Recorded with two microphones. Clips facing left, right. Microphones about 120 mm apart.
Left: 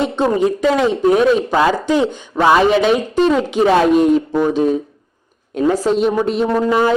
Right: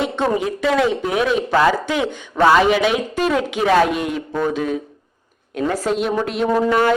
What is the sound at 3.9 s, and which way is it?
Speech, 40° left (ahead or behind).